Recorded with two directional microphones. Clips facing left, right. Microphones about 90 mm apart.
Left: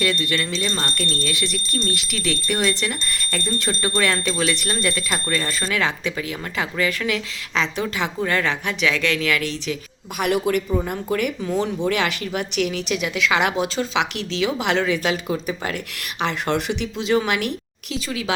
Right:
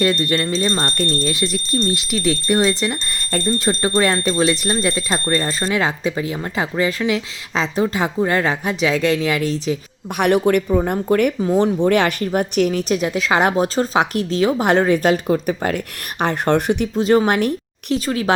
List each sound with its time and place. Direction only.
0.0 s speech: 40° right (ahead or behind)
7.5 s speech: 35° right (ahead or behind)
10.2 s a woman's voice: 55° right (ahead or behind)